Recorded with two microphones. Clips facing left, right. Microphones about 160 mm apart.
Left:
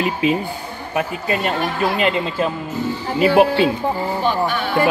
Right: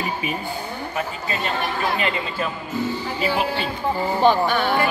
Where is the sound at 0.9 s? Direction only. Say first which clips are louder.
Left 8 dB; 55° left (ahead or behind).